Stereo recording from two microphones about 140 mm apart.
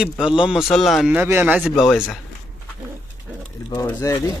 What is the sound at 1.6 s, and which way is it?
Speech, centre (ahead or behind).